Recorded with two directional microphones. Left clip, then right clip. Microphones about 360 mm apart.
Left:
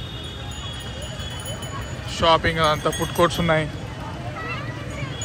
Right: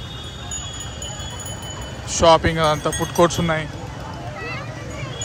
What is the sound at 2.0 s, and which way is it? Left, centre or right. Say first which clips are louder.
Speech: right 4 dB; centre.